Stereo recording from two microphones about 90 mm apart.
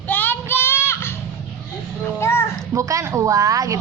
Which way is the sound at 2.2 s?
30° left (ahead or behind).